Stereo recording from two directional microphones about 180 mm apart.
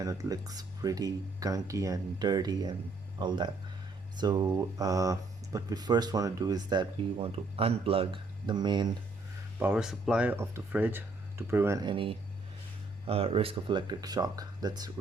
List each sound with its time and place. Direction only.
0.0 s speech: 20° right (ahead or behind)
9.6 s speech: 5° right (ahead or behind)